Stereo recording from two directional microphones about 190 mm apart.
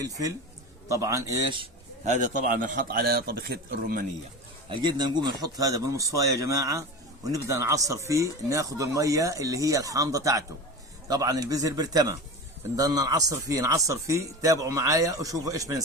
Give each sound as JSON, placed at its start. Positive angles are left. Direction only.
{"t": 0.0, "sound": "speech", "side_deg": -20}
{"t": 2.0, "sound": "a man's voice", "side_deg": -40}
{"t": 4.7, "sound": "speech", "side_deg": -25}